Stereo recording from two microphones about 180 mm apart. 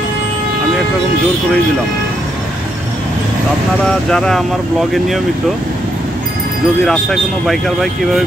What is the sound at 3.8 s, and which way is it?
Speech, 5° left (ahead or behind).